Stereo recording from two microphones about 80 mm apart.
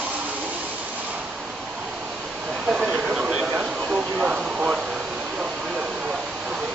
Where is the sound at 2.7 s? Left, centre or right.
Centre.